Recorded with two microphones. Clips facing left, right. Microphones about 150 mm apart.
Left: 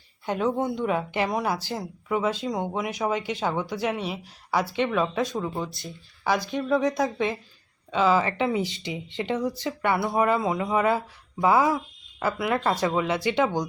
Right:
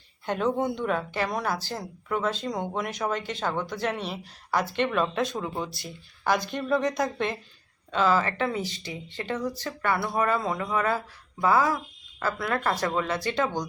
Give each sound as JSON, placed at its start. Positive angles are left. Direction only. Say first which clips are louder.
{"t": 0.3, "sound": "speech", "louder": "left 1 dB", "side_deg": 5}